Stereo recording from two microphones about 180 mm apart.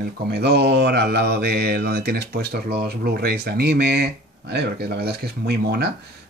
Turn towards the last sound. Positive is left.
turn(degrees=-65)  # may be behind; listen again after turning